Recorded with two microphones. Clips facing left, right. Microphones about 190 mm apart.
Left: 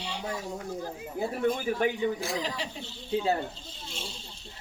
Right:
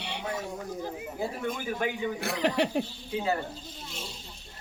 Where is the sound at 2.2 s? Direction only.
65° right (ahead or behind).